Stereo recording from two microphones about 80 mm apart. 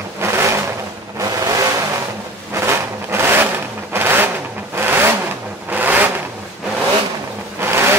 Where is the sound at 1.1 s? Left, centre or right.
Right.